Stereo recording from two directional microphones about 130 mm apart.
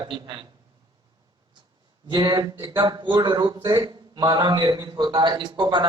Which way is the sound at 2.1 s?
35° right (ahead or behind).